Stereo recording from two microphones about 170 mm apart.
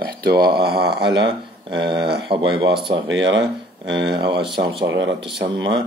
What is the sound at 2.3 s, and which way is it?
Speech, 35° right (ahead or behind).